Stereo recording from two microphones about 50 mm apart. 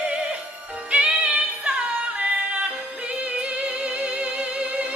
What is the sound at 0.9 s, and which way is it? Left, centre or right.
Music, right.